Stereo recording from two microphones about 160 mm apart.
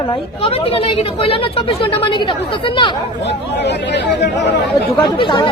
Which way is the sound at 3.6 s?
90° left.